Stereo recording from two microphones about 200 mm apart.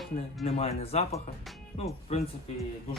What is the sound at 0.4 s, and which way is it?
Speech, 30° left (ahead or behind).